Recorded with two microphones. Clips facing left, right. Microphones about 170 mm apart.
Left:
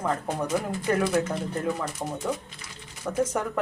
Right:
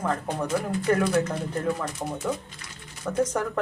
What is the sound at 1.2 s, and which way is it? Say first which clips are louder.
Speech: right 1 dB; 5° left (ahead or behind).